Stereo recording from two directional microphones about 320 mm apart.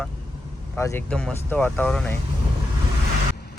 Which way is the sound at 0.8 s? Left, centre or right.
Centre.